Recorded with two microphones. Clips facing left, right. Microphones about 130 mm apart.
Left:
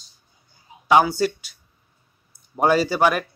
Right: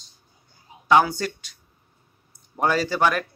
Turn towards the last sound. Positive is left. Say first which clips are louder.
# left 3 dB
turn(degrees=10)  # may be behind; listen again after turning